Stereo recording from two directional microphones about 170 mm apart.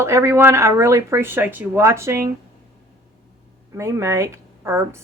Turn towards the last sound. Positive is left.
turn(degrees=-15)  # may be behind; listen again after turning